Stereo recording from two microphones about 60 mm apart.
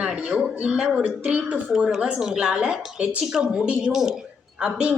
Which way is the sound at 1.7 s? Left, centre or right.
Centre.